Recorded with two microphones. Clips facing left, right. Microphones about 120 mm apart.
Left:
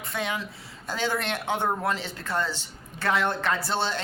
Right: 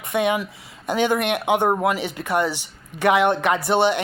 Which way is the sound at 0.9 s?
15° right (ahead or behind).